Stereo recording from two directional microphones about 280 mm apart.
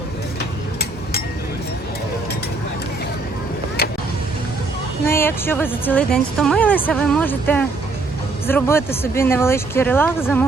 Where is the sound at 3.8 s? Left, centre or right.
Left.